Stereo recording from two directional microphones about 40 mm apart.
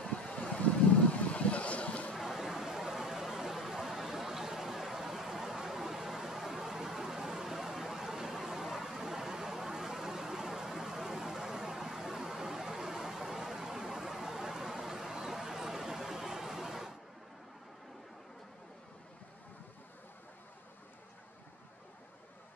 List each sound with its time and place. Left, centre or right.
0.0 s wind: left
0.4 s vehicle: left
2.2 s a sound: centre